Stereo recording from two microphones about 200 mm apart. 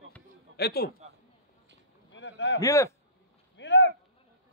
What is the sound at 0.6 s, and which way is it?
Speech, 50° left (ahead or behind).